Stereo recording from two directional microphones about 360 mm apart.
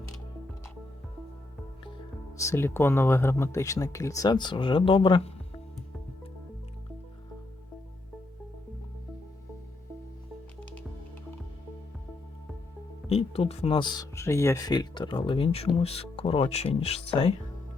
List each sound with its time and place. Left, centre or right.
2.4 s speech: centre
13.1 s speech: centre